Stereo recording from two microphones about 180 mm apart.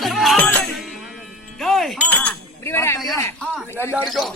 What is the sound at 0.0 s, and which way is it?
Music, centre (ahead or behind).